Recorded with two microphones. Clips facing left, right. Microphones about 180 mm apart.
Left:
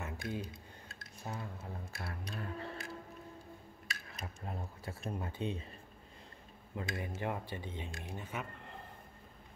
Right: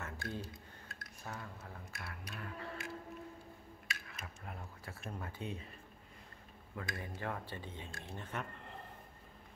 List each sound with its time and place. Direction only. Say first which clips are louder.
0.0 s a sound: left 3 dB; 20° left (ahead or behind)
3.8 s speech: left 2 dB; 40° left (ahead or behind); by 5.6 s 25° left (ahead or behind)
6.7 s speech: left 4 dB; 20° left (ahead or behind); by 8.8 s 5° left (ahead or behind)